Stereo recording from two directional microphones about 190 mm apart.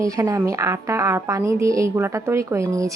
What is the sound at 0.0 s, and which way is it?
Speech, 15° right (ahead or behind).